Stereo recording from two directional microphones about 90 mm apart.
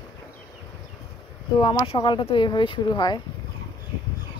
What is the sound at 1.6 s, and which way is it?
Speech, 65° left (ahead or behind).